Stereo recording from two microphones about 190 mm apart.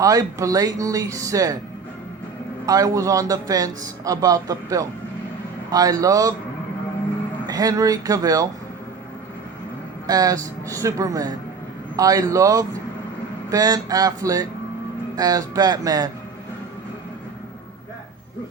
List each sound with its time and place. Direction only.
0.0 s speech: 20° right (ahead or behind)
2.6 s speech: 20° right (ahead or behind)
7.4 s speech: 20° right (ahead or behind)
10.1 s speech: 20° right (ahead or behind)